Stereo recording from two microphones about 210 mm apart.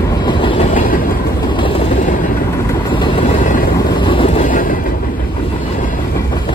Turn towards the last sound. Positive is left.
turn(degrees=40)  # may be behind; listen again after turning